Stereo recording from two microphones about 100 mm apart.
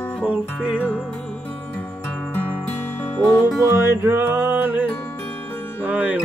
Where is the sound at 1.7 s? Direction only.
15° left (ahead or behind).